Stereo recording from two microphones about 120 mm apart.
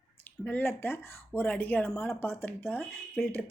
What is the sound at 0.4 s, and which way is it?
Speech, 15° left (ahead or behind).